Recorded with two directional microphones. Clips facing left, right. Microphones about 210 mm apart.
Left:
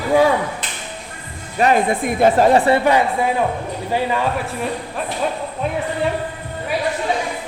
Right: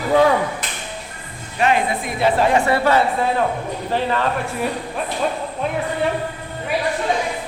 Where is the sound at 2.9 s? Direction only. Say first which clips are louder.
Left 1 dB; 15° left (ahead or behind).